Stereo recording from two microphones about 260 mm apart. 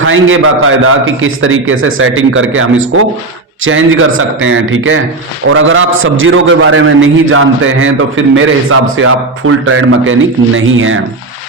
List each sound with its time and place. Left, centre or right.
0.0 s a man's voice: right